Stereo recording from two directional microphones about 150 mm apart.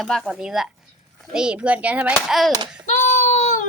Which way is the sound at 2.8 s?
55° left (ahead or behind).